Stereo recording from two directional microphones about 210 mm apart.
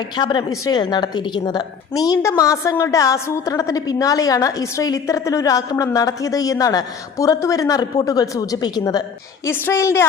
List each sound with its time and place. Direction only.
0.2 s a woman's voice: 20° left (ahead or behind)